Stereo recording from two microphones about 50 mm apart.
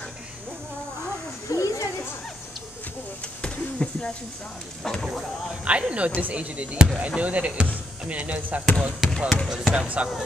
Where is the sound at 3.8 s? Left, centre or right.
Left.